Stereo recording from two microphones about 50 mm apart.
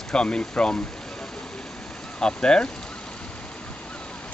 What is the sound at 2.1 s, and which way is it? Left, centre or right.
Speech, centre.